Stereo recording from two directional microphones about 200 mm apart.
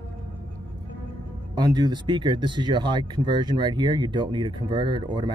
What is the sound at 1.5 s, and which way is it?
Speech, 20° right (ahead or behind).